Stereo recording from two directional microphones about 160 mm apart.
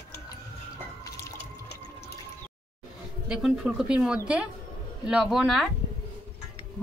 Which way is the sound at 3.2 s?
5° right (ahead or behind).